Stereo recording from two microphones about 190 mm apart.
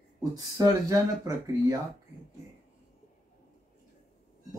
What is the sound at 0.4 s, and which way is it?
Speech, 20° right (ahead or behind).